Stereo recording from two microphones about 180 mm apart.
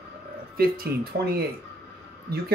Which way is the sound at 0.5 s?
55° right (ahead or behind).